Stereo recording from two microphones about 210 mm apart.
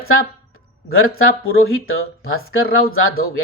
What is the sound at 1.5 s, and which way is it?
Speech, 75° left (ahead or behind).